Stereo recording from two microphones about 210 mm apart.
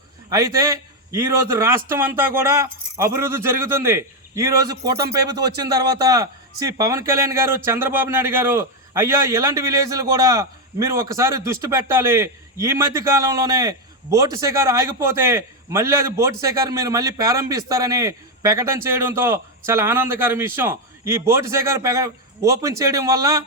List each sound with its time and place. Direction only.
0.3 s speech: 15° right (ahead or behind)